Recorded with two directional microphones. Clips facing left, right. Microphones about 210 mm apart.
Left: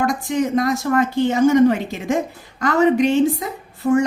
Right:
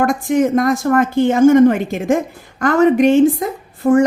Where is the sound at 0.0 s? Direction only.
50° right (ahead or behind).